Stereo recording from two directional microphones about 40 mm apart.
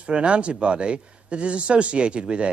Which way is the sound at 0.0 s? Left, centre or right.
Right.